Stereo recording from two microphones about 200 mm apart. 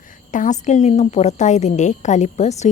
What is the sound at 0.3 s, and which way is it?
A woman's voice, 40° left (ahead or behind).